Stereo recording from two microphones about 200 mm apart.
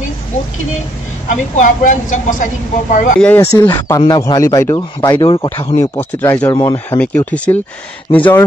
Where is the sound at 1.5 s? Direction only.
40° left (ahead or behind).